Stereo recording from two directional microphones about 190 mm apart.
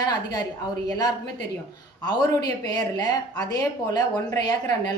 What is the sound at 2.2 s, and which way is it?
Speech, 20° left (ahead or behind).